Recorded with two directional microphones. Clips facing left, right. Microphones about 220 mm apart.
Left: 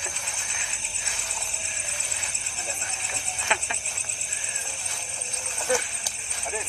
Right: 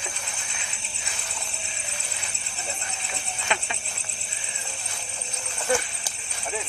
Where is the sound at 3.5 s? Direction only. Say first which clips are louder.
Right 1 dB; 45° right (ahead or behind).